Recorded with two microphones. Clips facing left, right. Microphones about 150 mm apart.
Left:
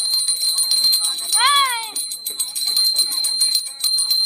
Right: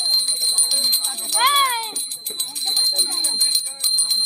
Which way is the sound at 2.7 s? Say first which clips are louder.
Right 4 dB; 55° right (ahead or behind).